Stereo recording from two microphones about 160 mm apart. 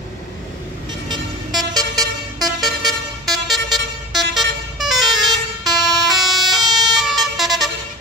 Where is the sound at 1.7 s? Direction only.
25° right (ahead or behind).